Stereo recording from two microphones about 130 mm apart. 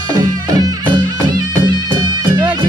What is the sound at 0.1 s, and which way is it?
Music, 30° right (ahead or behind).